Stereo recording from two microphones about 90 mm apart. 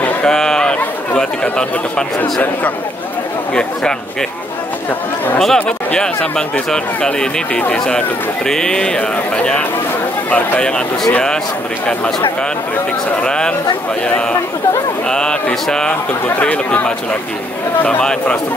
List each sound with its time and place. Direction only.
0.0 s chatter: 10° left (ahead or behind)
5.4 s speech: 10° left (ahead or behind)
13.2 s speech: 10° left (ahead or behind)
15.0 s speech: 10° left (ahead or behind)